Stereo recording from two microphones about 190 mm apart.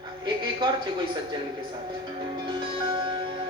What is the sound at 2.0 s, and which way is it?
Music, 25° right (ahead or behind).